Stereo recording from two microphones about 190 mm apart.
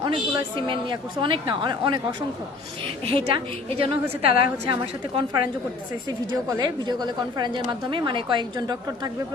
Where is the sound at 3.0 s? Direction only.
30° right (ahead or behind).